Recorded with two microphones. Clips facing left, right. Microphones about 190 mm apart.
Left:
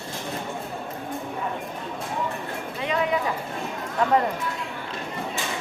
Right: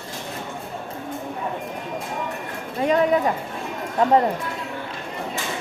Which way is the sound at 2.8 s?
45° right (ahead or behind).